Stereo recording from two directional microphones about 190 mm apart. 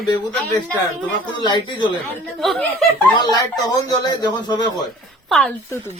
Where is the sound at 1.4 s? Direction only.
25° left (ahead or behind).